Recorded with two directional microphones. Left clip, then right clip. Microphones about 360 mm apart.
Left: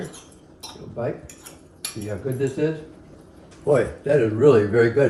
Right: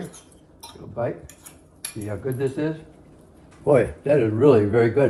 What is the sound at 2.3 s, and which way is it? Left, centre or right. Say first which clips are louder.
Speech: left 3 dB; centre.